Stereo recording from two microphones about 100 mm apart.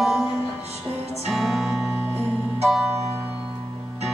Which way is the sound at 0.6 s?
90° right.